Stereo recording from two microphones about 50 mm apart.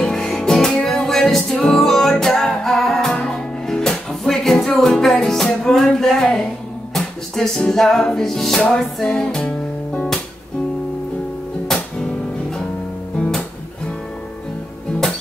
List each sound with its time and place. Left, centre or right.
0.0 s music: centre
9.4 s music: left
11.6 s music: centre